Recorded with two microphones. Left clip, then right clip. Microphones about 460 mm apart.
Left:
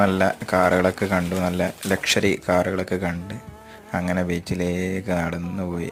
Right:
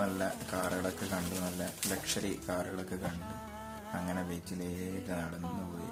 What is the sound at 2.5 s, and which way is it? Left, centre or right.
Speech, right.